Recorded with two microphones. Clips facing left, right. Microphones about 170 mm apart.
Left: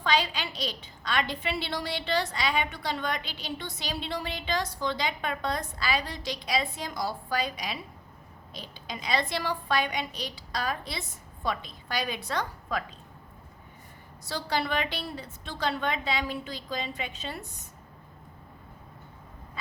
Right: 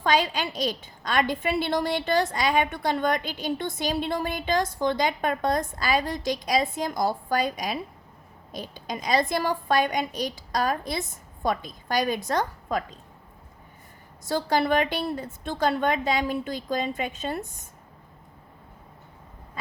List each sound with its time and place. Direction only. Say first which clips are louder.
0.0 s a child's voice: right 4 dB; 45° right (ahead or behind)
14.3 s a child's voice: right 7 dB; 50° right (ahead or behind)